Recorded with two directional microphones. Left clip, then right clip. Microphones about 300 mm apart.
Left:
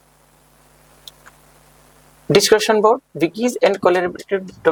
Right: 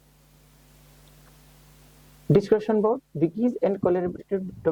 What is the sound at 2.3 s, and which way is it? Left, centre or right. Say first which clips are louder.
Speech: left 8 dB; centre.